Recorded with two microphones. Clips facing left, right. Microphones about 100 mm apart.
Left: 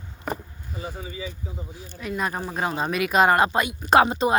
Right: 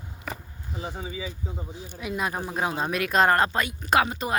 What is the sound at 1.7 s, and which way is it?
Speech, 10° right (ahead or behind).